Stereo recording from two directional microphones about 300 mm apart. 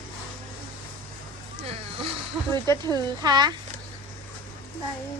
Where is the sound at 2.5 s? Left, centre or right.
Centre.